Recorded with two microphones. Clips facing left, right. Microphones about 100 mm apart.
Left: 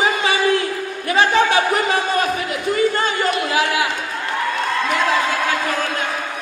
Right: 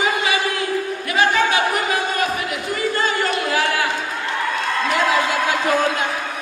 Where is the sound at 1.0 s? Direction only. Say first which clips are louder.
Left 3 dB; 30° left (ahead or behind).